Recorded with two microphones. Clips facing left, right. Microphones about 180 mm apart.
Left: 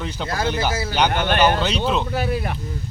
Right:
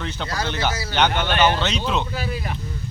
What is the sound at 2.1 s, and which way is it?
Speech, 55° left (ahead or behind).